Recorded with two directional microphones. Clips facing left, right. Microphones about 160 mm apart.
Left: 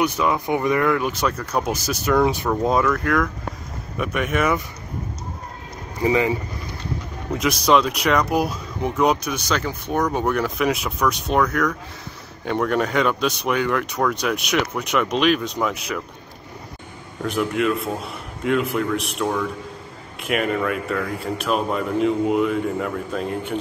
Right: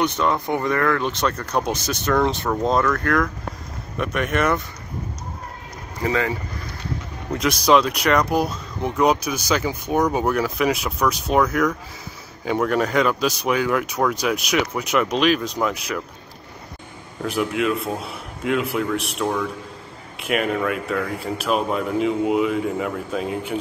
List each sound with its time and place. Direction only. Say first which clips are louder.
0.0 s speech: even; 10° left (ahead or behind)
6.0 s speech: left 3 dB; 15° left (ahead or behind)
7.3 s speech: right 1 dB; centre (ahead or behind)
17.2 s speech: left 1 dB; centre (ahead or behind)